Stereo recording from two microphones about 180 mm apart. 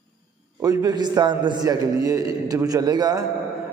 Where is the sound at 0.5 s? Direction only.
15° right (ahead or behind).